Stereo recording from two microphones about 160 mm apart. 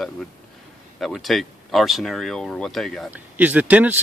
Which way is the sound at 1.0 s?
Centre (ahead or behind).